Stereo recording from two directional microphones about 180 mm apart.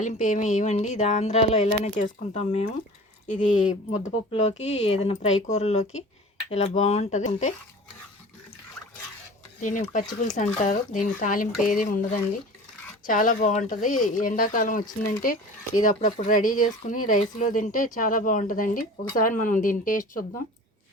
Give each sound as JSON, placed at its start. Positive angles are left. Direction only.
{"t": 0.0, "sound": "speech", "side_deg": 45}
{"t": 9.6, "sound": "speech", "side_deg": 45}